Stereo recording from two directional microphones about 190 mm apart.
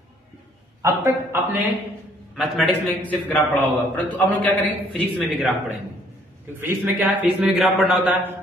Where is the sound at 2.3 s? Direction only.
Centre (ahead or behind).